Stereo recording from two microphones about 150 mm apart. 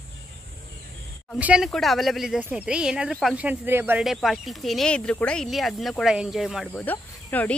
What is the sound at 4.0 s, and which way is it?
Speech, centre (ahead or behind).